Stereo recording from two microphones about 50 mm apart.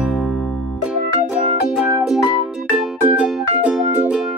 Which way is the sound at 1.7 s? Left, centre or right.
Right.